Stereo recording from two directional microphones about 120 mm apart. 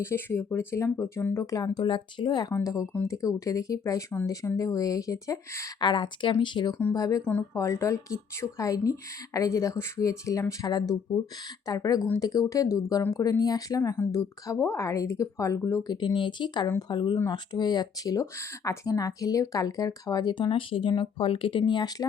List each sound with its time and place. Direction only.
0.0 s a woman's voice: 20° left (ahead or behind)
1.8 s speech: 40° left (ahead or behind)
2.9 s speech: 15° left (ahead or behind)
3.2 s a woman's voice: 30° left (ahead or behind)
5.8 s a woman's voice: 40° left (ahead or behind)